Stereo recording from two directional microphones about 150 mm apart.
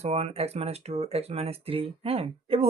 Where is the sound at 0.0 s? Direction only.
45° right (ahead or behind).